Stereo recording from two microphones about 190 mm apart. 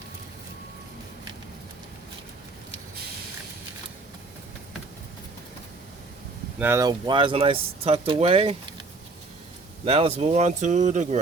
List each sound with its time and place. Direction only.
6.6 s speech: 15° right (ahead or behind); by 8.5 s 30° right (ahead or behind)
9.8 s speech: 30° right (ahead or behind)